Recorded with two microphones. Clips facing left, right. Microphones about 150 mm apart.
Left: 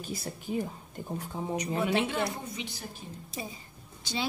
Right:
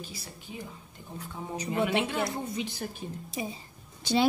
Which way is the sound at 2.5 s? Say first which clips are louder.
Right 6 dB; 45° right (ahead or behind).